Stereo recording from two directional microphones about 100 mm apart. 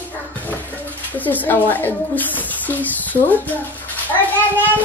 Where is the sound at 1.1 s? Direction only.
15° left (ahead or behind).